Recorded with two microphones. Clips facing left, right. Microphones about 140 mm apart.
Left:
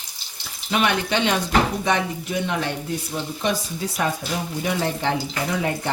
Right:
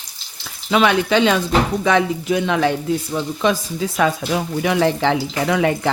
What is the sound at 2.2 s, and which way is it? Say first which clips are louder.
Speech: right 7 dB; 90° right.